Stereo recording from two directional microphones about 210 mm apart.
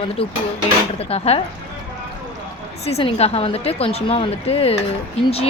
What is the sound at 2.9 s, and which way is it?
A woman's voice, 30° left (ahead or behind).